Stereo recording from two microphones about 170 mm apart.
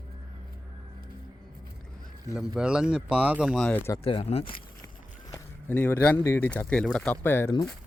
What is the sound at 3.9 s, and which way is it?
Speech, 30° left (ahead or behind).